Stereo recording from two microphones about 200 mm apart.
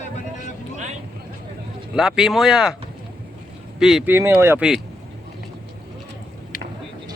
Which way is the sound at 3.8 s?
Centre (ahead or behind).